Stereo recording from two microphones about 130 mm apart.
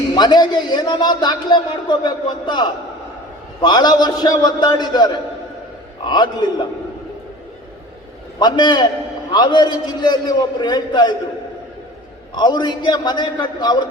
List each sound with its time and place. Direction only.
0.1 s a man's voice: 35° left (ahead or behind)
8.4 s a man's voice: 35° left (ahead or behind)
12.3 s a man's voice: 35° left (ahead or behind)